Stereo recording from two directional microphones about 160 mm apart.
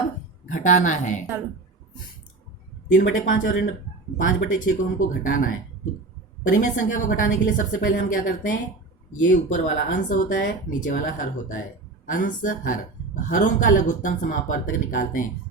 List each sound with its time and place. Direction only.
0.4 s a woman's voice: 50° left (ahead or behind)
2.9 s speech: 55° left (ahead or behind)
6.5 s speech: 55° left (ahead or behind)